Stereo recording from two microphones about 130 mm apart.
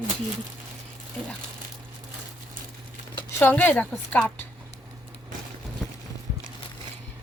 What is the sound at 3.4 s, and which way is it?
Speech, 15° left (ahead or behind).